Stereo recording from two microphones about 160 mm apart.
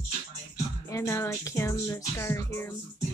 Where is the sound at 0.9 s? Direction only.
20° left (ahead or behind).